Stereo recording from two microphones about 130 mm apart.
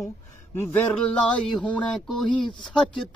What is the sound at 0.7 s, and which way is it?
Speech, 10° left (ahead or behind).